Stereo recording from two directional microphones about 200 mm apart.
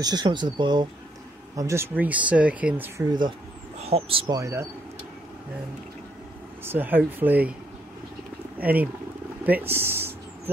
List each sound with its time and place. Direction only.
0.0 s speech: 20° right (ahead or behind)
3.8 s speech: 30° right (ahead or behind)
4.4 s speech: 15° right (ahead or behind)
6.6 s speech: 10° right (ahead or behind)
8.5 s speech: 10° right (ahead or behind)
9.4 s a sound: 10° right (ahead or behind)